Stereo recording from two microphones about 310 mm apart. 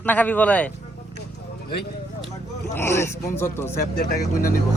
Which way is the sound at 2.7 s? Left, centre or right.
Centre.